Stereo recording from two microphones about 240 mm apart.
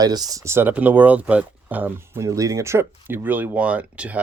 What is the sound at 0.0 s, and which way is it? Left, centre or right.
Speech, centre.